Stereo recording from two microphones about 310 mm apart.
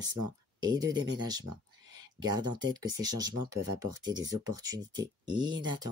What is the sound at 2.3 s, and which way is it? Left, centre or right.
Speech, centre.